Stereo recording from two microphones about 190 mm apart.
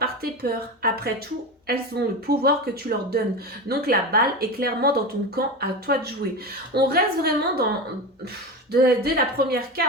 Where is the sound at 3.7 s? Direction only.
55° right (ahead or behind).